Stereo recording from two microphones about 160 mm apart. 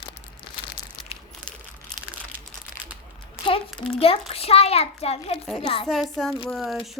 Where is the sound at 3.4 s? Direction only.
30° left (ahead or behind).